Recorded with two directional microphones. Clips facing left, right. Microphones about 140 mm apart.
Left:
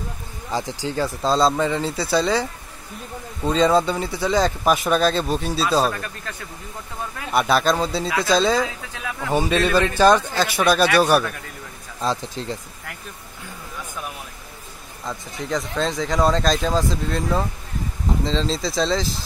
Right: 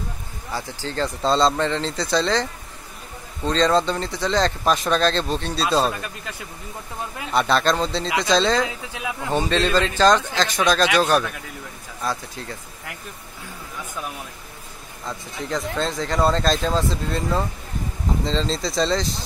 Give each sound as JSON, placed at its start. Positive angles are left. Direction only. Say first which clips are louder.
{"t": 0.5, "sound": "speech", "louder": "left 4 dB", "side_deg": 15}
{"t": 3.4, "sound": "speech", "louder": "left 1 dB", "side_deg": 10}
{"t": 7.3, "sound": "speech", "louder": "left 1 dB", "side_deg": 5}
{"t": 8.6, "sound": "speech", "louder": "right 1 dB", "side_deg": -15}
{"t": 9.3, "sound": "speech", "louder": "left 2 dB", "side_deg": 10}
{"t": 12.0, "sound": "speech", "louder": "left 3 dB", "side_deg": 20}
{"t": 15.0, "sound": "speech", "louder": "left 1 dB", "side_deg": 0}